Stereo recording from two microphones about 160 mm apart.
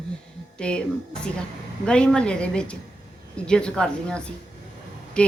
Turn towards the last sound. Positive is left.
turn(degrees=5)  # may be behind; listen again after turning